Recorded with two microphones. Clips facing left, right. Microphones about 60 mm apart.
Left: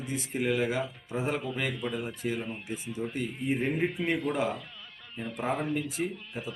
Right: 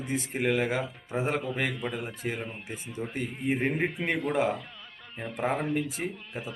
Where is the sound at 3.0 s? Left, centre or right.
Right.